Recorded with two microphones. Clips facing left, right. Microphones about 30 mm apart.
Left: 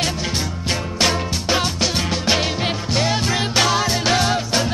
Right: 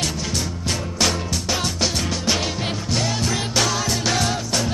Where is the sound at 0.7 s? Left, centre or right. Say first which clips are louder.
Left 3 dB; left.